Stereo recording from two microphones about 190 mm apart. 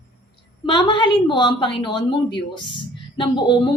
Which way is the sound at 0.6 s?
25° left (ahead or behind).